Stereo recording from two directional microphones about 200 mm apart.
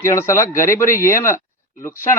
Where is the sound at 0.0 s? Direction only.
15° left (ahead or behind).